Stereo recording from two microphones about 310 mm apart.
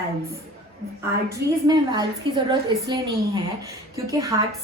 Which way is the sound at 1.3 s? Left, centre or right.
Centre.